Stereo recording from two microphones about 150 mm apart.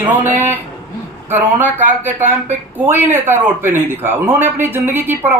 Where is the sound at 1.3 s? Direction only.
15° right (ahead or behind).